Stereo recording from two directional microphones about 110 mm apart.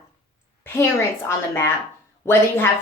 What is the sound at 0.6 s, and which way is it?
A woman's voice, 25° left (ahead or behind).